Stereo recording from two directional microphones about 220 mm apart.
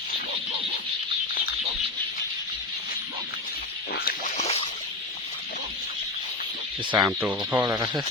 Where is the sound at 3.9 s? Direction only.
40° left (ahead or behind).